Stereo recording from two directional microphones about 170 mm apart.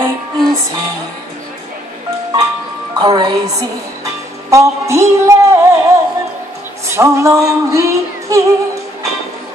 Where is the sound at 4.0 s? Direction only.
20° right (ahead or behind).